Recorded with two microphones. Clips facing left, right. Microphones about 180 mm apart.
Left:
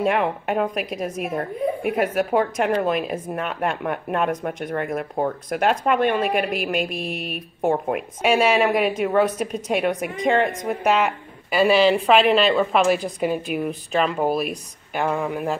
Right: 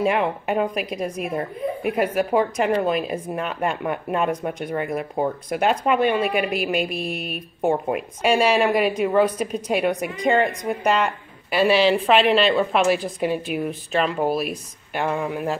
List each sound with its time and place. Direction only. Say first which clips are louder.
0.0 s a woman's voice: even; centre (ahead or behind)